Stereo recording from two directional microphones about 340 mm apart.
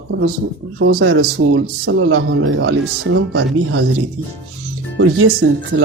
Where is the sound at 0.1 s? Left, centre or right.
Right.